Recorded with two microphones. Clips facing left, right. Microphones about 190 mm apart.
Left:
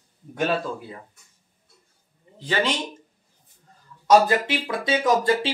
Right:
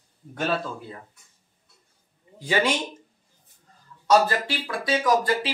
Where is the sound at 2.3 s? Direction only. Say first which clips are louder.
Right 1 dB; 10° right (ahead or behind).